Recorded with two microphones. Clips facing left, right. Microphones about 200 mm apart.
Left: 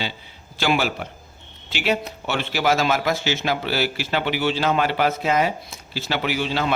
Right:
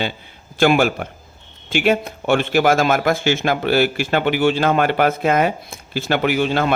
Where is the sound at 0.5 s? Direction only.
50° right (ahead or behind).